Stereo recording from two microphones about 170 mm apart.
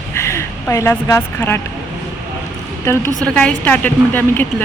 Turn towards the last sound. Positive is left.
turn(degrees=10)  # may be behind; listen again after turning